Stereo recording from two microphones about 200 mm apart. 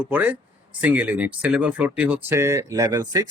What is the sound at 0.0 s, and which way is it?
Speech, 10° right (ahead or behind).